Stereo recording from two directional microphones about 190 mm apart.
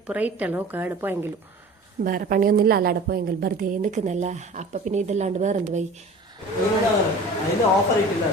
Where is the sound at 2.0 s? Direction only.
50° right (ahead or behind).